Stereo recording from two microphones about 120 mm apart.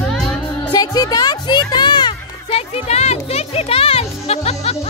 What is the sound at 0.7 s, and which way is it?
Music, 30° left (ahead or behind).